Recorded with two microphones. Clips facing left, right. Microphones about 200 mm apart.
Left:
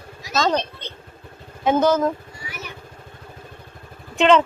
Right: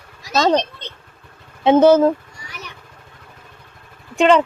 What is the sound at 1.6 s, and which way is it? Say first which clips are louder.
Speech: right 7 dB; 30° right (ahead or behind).